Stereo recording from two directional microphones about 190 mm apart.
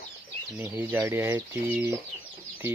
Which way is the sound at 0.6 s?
10° right (ahead or behind).